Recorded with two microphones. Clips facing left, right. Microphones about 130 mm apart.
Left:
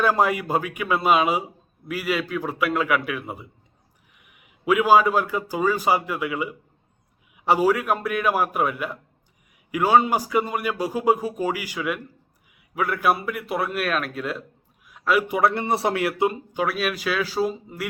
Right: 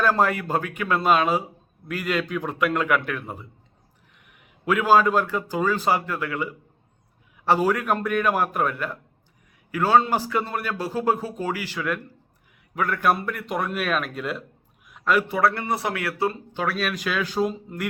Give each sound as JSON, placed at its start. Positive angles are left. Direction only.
{"t": 0.0, "sound": "a man's voice", "side_deg": 10}
{"t": 14.8, "sound": "a sound", "side_deg": 5}
{"t": 15.3, "sound": "a man's voice", "side_deg": 20}